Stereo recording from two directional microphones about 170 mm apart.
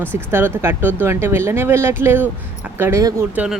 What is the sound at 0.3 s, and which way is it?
Speech, 15° right (ahead or behind).